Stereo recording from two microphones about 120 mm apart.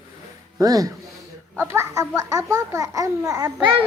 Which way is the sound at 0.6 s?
30° right (ahead or behind).